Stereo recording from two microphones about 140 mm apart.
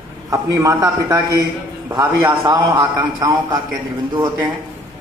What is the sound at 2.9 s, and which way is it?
Speech, 20° right (ahead or behind).